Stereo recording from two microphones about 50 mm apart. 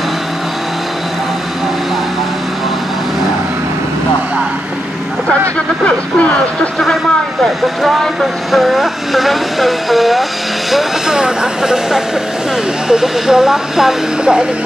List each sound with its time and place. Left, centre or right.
5.9 s vehicle: left
7.8 s speech: centre
11.1 s speech: centre